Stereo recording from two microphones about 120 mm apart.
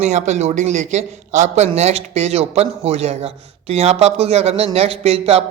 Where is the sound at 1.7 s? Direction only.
65° right (ahead or behind).